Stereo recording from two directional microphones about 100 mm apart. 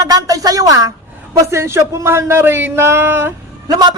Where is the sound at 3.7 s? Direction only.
45° right (ahead or behind).